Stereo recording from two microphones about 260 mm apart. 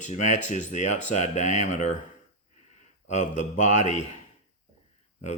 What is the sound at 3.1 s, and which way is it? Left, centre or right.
Speech, left.